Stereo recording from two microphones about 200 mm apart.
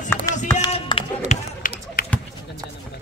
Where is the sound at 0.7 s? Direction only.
30° left (ahead or behind).